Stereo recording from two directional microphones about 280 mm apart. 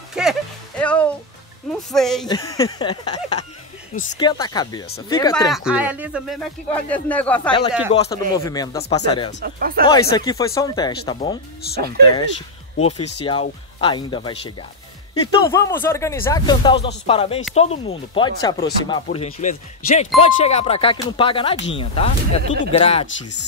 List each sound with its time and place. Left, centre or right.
0.1 s music: centre
1.7 s speech: centre
2.2 s speech: centre
5.5 s speech: centre
7.9 s speech: left
8.4 s speech: centre
9.4 s speech: right
9.8 s speech: centre